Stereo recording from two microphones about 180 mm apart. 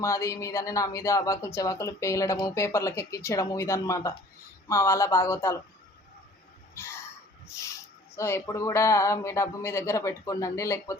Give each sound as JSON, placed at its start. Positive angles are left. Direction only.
{"t": 0.0, "sound": "speech", "side_deg": 15}
{"t": 6.7, "sound": "a sound", "side_deg": 15}
{"t": 8.1, "sound": "speech", "side_deg": 15}